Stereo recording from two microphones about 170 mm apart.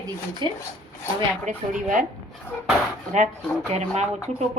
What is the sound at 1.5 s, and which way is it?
Speech, 50° right (ahead or behind).